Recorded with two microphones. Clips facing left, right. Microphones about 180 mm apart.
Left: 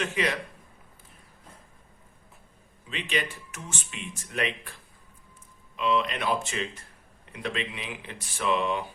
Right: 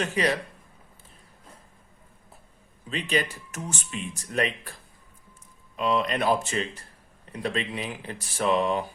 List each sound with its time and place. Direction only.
0.0 s speech: 35° right (ahead or behind)
2.9 s speech: 40° right (ahead or behind)